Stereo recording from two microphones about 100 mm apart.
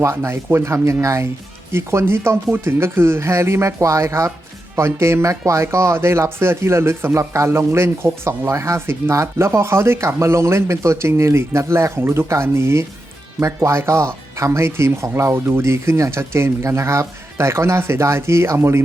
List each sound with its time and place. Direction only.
0.0 s speech: 30° right (ahead or behind)